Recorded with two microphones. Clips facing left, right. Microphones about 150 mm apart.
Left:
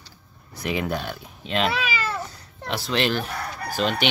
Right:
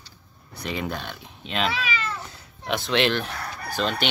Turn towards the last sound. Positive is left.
turn(degrees=10)  # may be behind; listen again after turning